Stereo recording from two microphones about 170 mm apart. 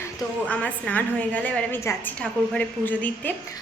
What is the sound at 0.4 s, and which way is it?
A woman's voice, 10° left (ahead or behind).